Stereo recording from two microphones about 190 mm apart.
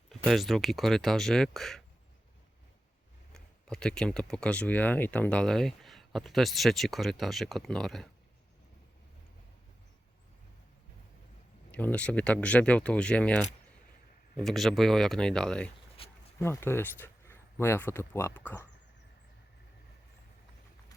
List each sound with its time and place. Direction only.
0.1 s speech: centre (ahead or behind)
3.3 s speech: 5° left (ahead or behind)
11.7 s speech: 5° left (ahead or behind)
16.0 s a sound: 30° left (ahead or behind)
16.4 s speech: 15° left (ahead or behind)